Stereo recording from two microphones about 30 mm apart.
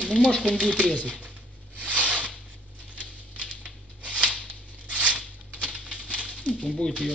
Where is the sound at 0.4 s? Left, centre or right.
Right.